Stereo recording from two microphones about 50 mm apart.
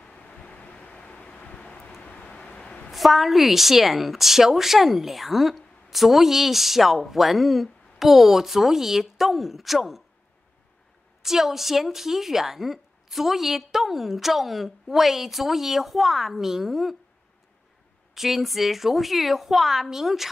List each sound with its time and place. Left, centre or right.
0.0 s vehicle: left
2.9 s a woman's voice: centre
11.2 s a woman's voice: centre
18.1 s a woman's voice: centre